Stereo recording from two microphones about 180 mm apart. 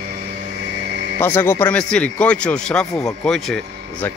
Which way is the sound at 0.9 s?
70° right (ahead or behind).